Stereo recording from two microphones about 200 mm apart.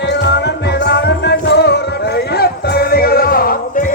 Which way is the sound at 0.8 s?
55° left (ahead or behind).